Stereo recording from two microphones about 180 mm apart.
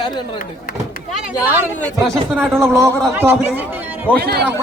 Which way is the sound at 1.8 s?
5° left (ahead or behind).